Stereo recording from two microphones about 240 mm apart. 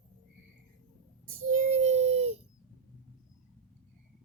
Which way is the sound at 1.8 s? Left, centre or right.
Right.